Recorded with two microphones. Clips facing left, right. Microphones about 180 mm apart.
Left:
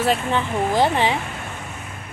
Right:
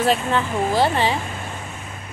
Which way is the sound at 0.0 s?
15° left (ahead or behind).